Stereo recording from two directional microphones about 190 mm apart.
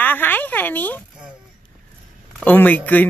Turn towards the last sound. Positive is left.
turn(degrees=10)  # may be behind; listen again after turning